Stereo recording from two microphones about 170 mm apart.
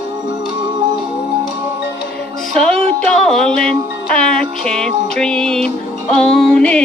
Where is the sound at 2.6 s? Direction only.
5° left (ahead or behind).